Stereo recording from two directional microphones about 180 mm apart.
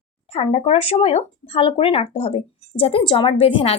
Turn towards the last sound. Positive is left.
turn(degrees=30)  # may be behind; listen again after turning